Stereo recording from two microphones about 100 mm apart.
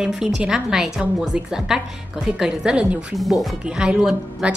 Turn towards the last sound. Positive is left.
turn(degrees=-5)  # may be behind; listen again after turning